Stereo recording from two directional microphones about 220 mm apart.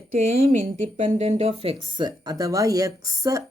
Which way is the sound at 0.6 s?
30° right (ahead or behind).